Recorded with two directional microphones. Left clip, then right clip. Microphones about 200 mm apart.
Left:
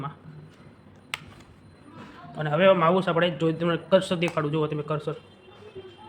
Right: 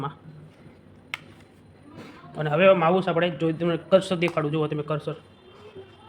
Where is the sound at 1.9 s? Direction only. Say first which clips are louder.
Right 2 dB; 15° right (ahead or behind).